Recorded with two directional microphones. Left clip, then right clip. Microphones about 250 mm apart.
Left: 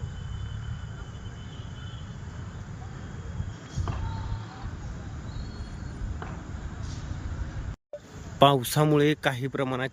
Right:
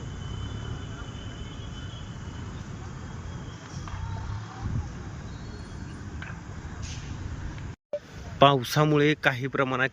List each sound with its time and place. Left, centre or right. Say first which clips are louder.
8.4 s speech: right 1 dB; centre